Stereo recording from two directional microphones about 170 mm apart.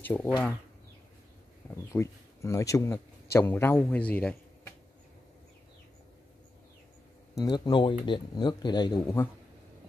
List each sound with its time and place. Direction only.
0.0 s speech: 10° left (ahead or behind)
1.9 s speech: 15° left (ahead or behind)
7.4 s speech: 25° left (ahead or behind)